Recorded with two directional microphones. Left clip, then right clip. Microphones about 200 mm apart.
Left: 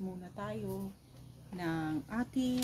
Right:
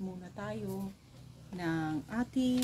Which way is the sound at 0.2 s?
10° left (ahead or behind).